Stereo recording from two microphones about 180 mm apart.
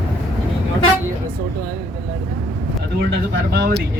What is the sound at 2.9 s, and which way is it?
Speech, 70° right (ahead or behind).